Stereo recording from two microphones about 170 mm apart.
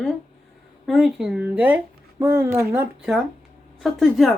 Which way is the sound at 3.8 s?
Centre (ahead or behind).